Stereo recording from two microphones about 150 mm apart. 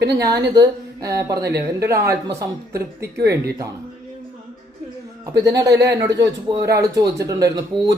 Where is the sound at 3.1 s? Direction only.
90° right.